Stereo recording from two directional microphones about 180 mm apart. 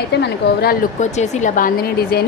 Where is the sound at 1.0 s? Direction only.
40° left (ahead or behind); by 2.2 s 55° left (ahead or behind).